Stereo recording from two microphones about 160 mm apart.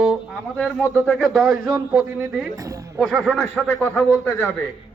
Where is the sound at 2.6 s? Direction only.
20° right (ahead or behind).